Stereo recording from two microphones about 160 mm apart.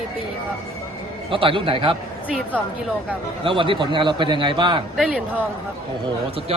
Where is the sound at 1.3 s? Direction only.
35° right (ahead or behind).